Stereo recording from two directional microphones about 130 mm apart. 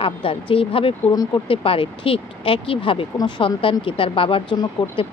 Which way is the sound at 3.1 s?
30° left (ahead or behind).